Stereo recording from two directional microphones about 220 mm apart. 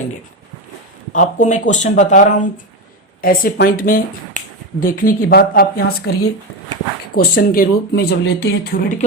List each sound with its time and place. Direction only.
1.1 s speech: 35° left (ahead or behind)